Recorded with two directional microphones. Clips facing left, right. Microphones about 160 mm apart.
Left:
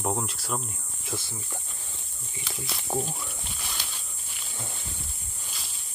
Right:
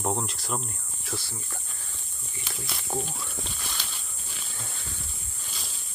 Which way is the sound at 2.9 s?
15° left (ahead or behind).